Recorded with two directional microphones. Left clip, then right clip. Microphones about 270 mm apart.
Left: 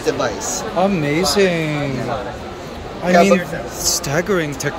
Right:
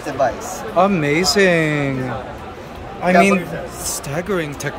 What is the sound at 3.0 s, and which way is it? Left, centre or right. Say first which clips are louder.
Speech: left 1 dB; centre.